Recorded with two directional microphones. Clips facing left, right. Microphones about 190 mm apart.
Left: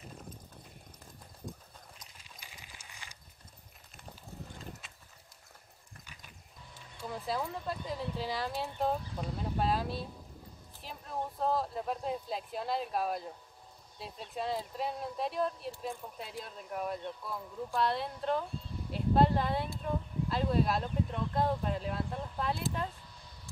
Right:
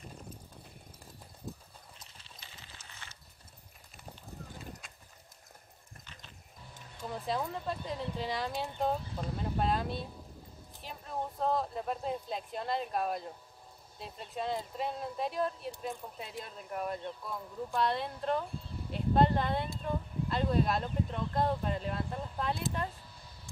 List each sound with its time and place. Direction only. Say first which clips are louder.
2.1 s coin: even; 10° left (ahead or behind)
7.1 s speech: right 1 dB; centre (ahead or behind)